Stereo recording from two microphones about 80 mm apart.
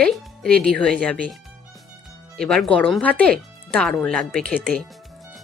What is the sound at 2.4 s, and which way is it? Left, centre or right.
Speech, centre.